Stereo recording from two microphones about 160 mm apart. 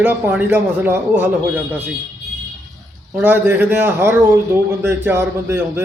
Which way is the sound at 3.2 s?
10° right (ahead or behind).